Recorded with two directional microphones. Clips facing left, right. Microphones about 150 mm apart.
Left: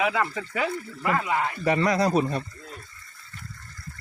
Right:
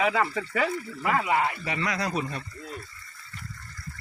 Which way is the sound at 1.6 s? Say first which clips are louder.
Left 8 dB; 40° left (ahead or behind).